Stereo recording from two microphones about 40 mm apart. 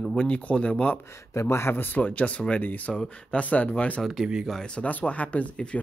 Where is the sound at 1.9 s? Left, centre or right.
Left.